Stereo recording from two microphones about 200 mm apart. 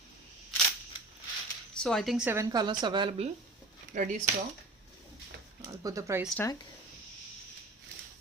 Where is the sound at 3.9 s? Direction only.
40° right (ahead or behind).